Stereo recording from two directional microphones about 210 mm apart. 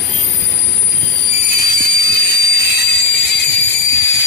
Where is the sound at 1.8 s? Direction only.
50° left (ahead or behind).